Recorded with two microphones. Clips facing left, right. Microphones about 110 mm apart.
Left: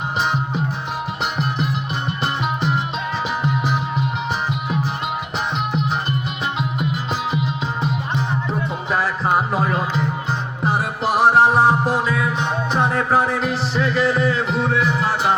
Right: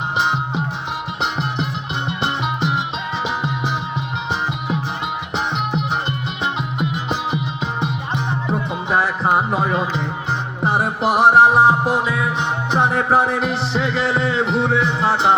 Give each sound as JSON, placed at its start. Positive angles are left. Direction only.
{"t": 0.2, "sound": "music", "side_deg": -20}
{"t": 5.7, "sound": "music", "side_deg": -25}